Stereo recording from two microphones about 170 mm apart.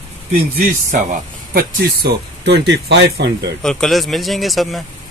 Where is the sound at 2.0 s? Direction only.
80° right.